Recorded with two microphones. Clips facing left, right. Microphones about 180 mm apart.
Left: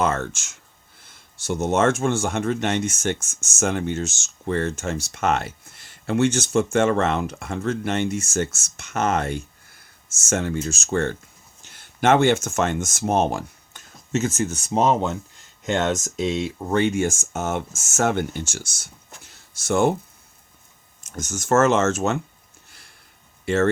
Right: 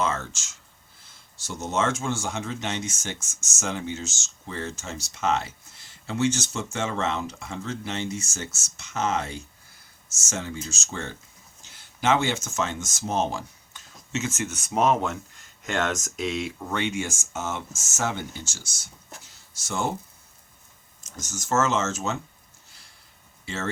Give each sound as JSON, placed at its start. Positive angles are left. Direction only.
{"t": 0.0, "sound": "speech", "side_deg": 55}
{"t": 16.7, "sound": "speech", "side_deg": 45}
{"t": 21.2, "sound": "speech", "side_deg": 60}